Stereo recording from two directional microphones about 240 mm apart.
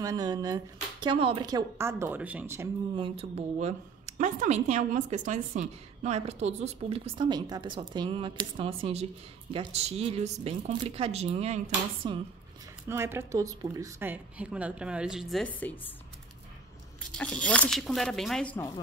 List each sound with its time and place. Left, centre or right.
0.0 s speech: centre
3.2 s a woman's voice: right
12.8 s a woman's voice: centre
17.1 s a woman's voice: centre